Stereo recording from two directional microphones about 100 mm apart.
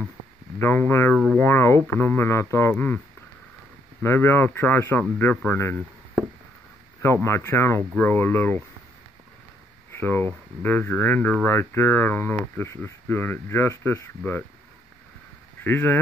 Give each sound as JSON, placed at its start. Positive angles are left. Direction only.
{"t": 0.6, "sound": "speech", "side_deg": 25}
{"t": 1.1, "sound": "a sound", "side_deg": 10}
{"t": 1.4, "sound": "speech", "side_deg": 25}
{"t": 4.0, "sound": "speech", "side_deg": 20}
{"t": 7.2, "sound": "speech", "side_deg": 25}
{"t": 9.9, "sound": "speech", "side_deg": 20}
{"t": 15.6, "sound": "speech", "side_deg": 20}